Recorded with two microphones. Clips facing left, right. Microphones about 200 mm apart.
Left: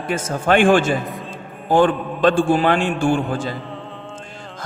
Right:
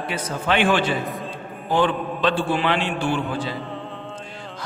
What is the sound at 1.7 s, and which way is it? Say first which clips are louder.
A man's voice: left 5 dB; 45° left (ahead or behind).